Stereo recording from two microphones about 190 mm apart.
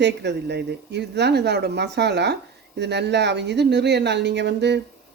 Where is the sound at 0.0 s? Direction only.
65° right (ahead or behind).